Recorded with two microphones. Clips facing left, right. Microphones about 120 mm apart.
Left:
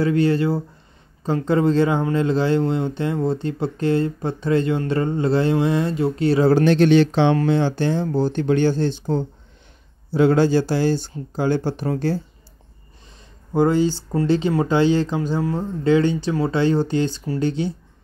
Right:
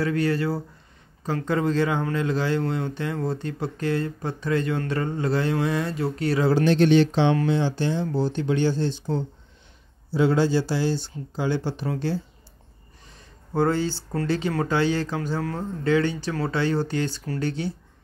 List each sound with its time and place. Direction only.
0.0 s speech: 25° left (ahead or behind)
6.5 s speech: 60° left (ahead or behind); by 12.2 s 45° left (ahead or behind)
13.5 s speech: 15° left (ahead or behind)